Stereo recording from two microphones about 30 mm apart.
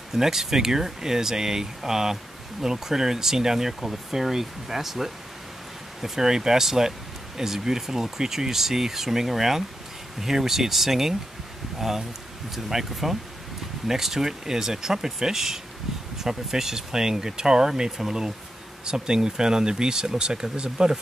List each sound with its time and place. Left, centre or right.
0.1 s speech: centre; by 21.0 s right